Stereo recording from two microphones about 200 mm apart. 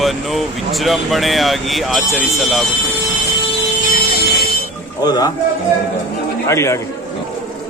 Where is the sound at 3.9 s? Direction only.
50° left (ahead or behind).